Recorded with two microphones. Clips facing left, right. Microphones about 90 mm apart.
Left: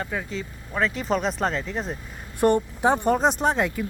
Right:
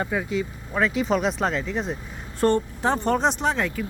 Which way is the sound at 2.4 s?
15° left (ahead or behind).